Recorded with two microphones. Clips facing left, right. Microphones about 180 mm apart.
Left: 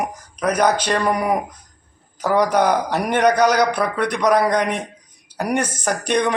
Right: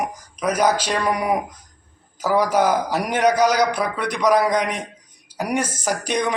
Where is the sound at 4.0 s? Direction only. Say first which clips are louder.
Left 4 dB; 55° left (ahead or behind).